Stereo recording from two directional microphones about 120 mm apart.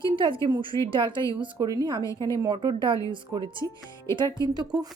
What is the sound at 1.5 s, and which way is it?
A woman's voice, 30° right (ahead or behind).